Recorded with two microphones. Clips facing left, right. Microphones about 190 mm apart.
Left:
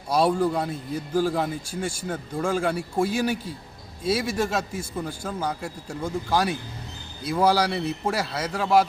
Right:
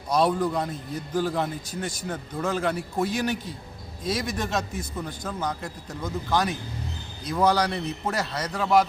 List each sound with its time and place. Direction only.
0.3 s a man's voice: 10° left (ahead or behind)